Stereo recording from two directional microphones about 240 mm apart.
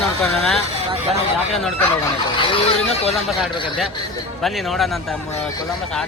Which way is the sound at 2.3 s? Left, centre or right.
Left.